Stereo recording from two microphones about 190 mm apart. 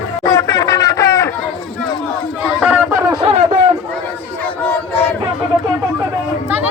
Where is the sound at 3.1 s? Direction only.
25° right (ahead or behind).